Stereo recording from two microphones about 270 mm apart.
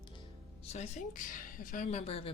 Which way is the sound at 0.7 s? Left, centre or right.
Left.